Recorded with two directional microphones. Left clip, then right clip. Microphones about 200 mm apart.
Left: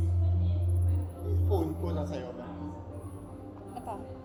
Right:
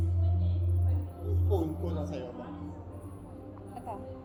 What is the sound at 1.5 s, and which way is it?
Music, 20° right (ahead or behind).